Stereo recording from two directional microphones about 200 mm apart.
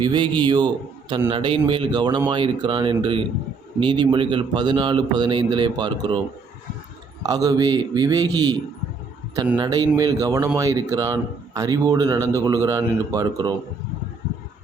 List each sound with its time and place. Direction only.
0.0 s a man's voice: 25° right (ahead or behind)
7.2 s a man's voice: 20° right (ahead or behind)
9.6 s speech: 20° right (ahead or behind)